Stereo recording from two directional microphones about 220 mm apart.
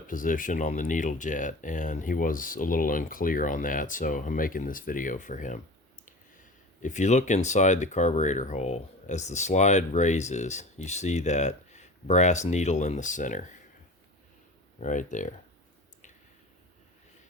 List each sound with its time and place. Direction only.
0.1 s speech: 35° left (ahead or behind)
6.8 s speech: 35° left (ahead or behind)
14.8 s speech: 35° left (ahead or behind)